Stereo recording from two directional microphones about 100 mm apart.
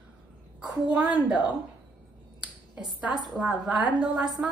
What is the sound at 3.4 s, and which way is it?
Speech, centre (ahead or behind).